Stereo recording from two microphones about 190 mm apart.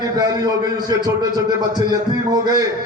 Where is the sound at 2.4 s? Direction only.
20° right (ahead or behind).